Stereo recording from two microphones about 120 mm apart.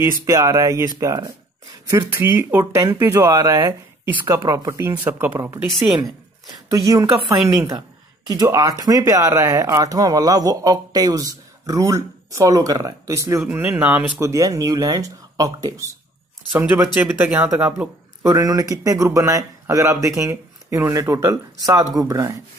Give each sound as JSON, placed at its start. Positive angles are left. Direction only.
{"t": 0.0, "sound": "speech", "side_deg": -25}
{"t": 2.0, "sound": "speech", "side_deg": -20}
{"t": 6.7, "sound": "speech", "side_deg": -30}
{"t": 13.5, "sound": "speech", "side_deg": -15}
{"t": 14.2, "sound": "speech", "side_deg": -25}
{"t": 16.5, "sound": "speech", "side_deg": -15}
{"t": 18.2, "sound": "speech", "side_deg": -30}